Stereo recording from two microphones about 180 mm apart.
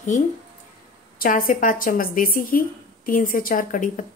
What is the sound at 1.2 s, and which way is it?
A woman's voice, 50° left (ahead or behind).